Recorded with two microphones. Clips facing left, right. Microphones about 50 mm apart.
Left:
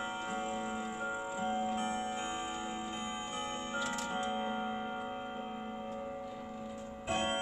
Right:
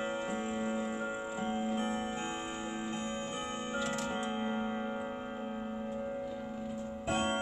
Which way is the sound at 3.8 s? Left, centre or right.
Right.